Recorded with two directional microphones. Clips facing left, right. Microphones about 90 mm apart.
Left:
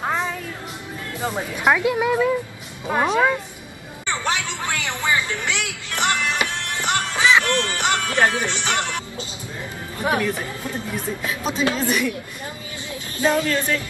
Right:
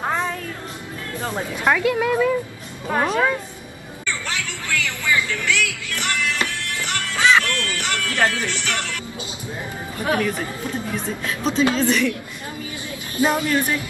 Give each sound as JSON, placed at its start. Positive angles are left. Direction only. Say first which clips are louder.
{"t": 1.6, "sound": "a woman's voice", "louder": "even", "side_deg": 15}
{"t": 2.9, "sound": "a woman's voice", "louder": "left 1 dB", "side_deg": 5}
{"t": 4.2, "sound": "music", "louder": "left 4 dB", "side_deg": 20}
{"t": 11.2, "sound": "a woman's voice", "louder": "right 3 dB", "side_deg": 10}
{"t": 13.2, "sound": "speech", "louder": "right 1 dB", "side_deg": -15}